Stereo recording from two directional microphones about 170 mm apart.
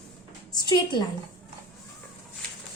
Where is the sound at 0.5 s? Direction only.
25° left (ahead or behind).